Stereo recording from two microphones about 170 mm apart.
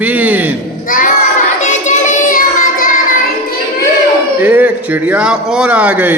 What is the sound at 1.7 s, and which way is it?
Child singing, 45° left (ahead or behind).